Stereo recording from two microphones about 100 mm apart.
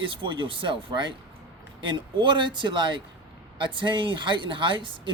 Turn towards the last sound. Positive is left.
turn(degrees=-55)  # may be behind; listen again after turning